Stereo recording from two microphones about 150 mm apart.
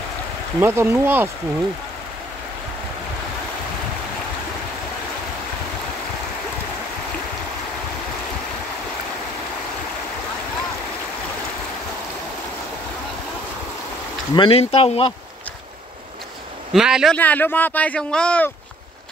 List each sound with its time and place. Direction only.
0.6 s speech: 15° right (ahead or behind)
14.3 s speech: 35° left (ahead or behind)
16.7 s speech: 5° right (ahead or behind)
17.1 s speech: 10° left (ahead or behind)